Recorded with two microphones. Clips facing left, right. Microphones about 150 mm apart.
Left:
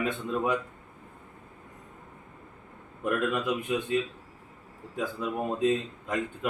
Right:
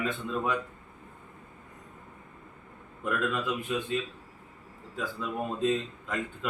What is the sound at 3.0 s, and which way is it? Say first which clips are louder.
Speech: left 2 dB; 20° left (ahead or behind).